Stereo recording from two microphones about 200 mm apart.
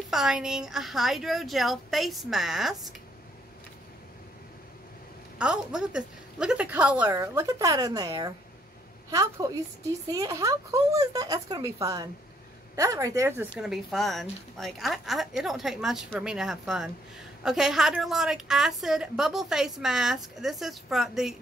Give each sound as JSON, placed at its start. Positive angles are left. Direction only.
{"t": 0.1, "sound": "a woman's voice", "side_deg": 0}
{"t": 5.4, "sound": "a woman's voice", "side_deg": -5}
{"t": 13.6, "sound": "a woman's voice", "side_deg": 0}